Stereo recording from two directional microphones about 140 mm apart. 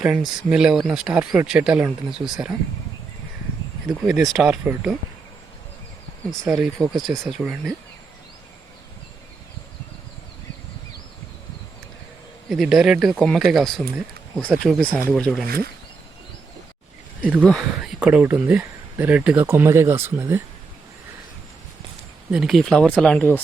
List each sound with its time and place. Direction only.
0.0 s speech: 5° right (ahead or behind)
4.0 s speech: centre (ahead or behind)
6.5 s speech: centre (ahead or behind)
12.5 s speech: centre (ahead or behind)
15.4 s speech: 90° right
17.4 s speech: centre (ahead or behind); by 20.4 s 20° right (ahead or behind)
22.3 s speech: 5° right (ahead or behind)